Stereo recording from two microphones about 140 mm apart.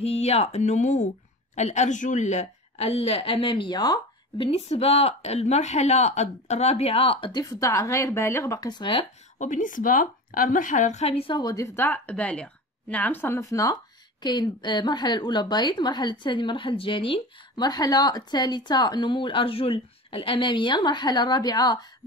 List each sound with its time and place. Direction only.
0.0 s a woman's voice: 50° left (ahead or behind); by 4.5 s 30° left (ahead or behind)
4.5 s a woman's voice: 45° left (ahead or behind)
7.4 s speech: 25° left (ahead or behind)
9.4 s a woman's voice: 65° left (ahead or behind); by 17.1 s 40° left (ahead or behind)
17.6 s speech: 30° left (ahead or behind)